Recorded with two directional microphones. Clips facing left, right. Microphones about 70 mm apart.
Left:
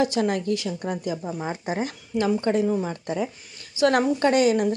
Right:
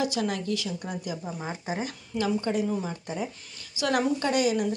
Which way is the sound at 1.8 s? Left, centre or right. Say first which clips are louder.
Left 5 dB; left.